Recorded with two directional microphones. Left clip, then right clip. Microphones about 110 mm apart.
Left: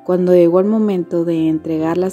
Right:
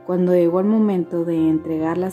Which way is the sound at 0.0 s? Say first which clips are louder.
Left 5 dB; 45° left (ahead or behind).